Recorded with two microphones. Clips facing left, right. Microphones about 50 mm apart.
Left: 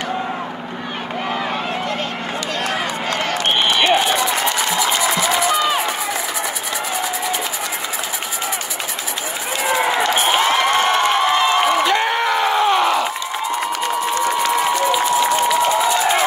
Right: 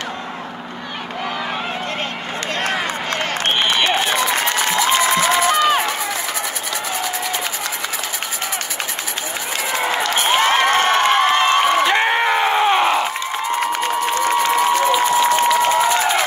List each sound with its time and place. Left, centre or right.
2.6 s run: right
4.0 s crowd: right
10.0 s crowd: left
10.4 s crowd: right
11.9 s crowd: right
14.2 s crowd: right